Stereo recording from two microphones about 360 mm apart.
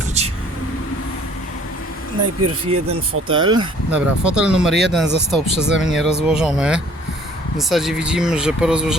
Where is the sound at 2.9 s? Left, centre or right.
Centre.